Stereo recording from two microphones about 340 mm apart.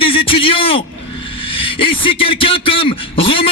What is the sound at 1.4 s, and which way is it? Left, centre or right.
A man's voice, centre.